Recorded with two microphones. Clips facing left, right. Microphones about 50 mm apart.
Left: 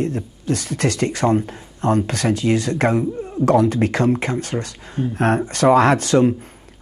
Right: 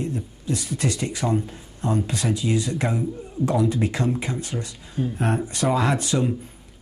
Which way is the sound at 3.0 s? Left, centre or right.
Left.